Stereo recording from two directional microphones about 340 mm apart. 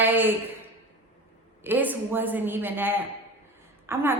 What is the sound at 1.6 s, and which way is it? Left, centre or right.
A woman's voice, centre.